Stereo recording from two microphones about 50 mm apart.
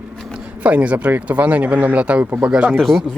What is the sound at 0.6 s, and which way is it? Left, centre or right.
Speech, right.